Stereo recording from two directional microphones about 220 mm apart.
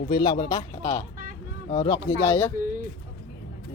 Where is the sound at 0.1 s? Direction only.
20° left (ahead or behind).